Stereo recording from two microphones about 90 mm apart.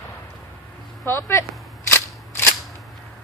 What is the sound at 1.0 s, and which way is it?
Speech, 25° left (ahead or behind).